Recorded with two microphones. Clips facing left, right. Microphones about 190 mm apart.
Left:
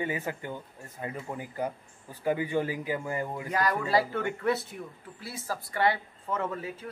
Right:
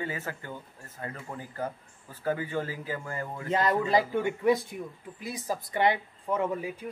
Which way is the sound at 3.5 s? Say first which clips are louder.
Right 4 dB; 25° right (ahead or behind).